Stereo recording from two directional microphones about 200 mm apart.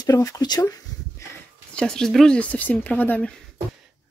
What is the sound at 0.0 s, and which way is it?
Speech, 15° left (ahead or behind).